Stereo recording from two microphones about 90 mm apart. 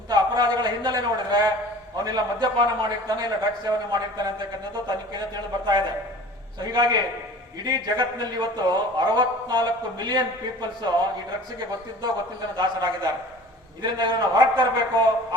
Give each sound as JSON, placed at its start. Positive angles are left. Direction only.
{"t": 0.1, "sound": "a sound", "side_deg": -50}
{"t": 2.0, "sound": "a man's voice", "side_deg": -50}
{"t": 12.5, "sound": "a man's voice", "side_deg": -50}